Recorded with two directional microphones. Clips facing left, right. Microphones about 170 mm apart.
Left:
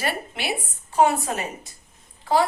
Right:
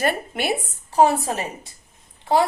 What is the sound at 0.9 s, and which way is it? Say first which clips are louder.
Speech: right 2 dB; 35° right (ahead or behind).